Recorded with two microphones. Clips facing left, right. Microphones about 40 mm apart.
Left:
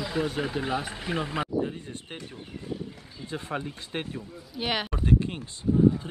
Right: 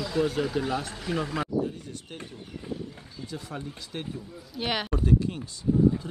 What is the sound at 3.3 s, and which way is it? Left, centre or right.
Speech, left.